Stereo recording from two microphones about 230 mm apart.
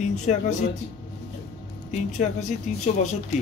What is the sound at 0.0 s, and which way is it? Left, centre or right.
Speech, left.